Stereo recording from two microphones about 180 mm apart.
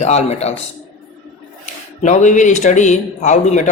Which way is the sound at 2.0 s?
40° left (ahead or behind).